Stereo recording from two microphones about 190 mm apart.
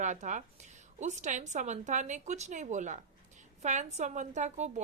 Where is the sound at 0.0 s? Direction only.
40° right (ahead or behind).